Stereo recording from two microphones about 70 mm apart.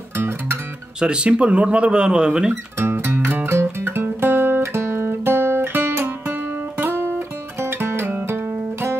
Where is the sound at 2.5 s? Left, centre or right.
Right.